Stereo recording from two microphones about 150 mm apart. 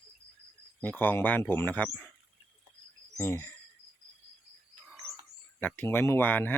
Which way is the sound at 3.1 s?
15° left (ahead or behind).